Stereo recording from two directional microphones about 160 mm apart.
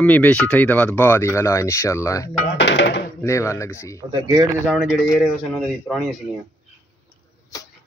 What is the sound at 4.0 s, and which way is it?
Speech, 25° right (ahead or behind).